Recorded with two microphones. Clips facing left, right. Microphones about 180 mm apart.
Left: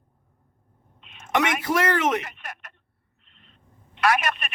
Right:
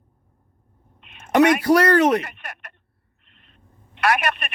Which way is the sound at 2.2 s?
60° right (ahead or behind).